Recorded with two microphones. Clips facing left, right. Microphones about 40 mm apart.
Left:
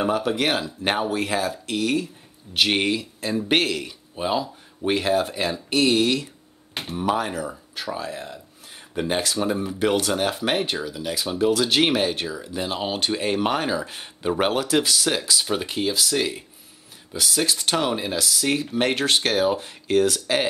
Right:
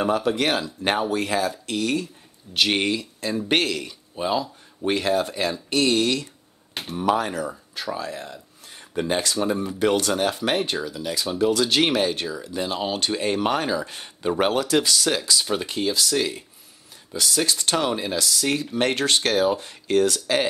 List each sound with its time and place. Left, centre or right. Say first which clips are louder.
0.0 s speech: even; centre